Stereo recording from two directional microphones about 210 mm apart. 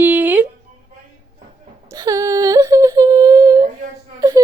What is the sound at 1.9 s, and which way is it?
Humming, 15° right (ahead or behind).